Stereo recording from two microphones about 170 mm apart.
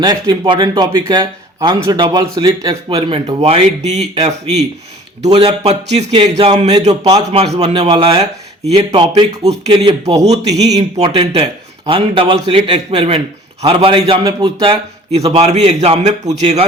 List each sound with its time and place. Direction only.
0.0 s a man's voice: 25° right (ahead or behind)
3.2 s a man's voice: 35° right (ahead or behind)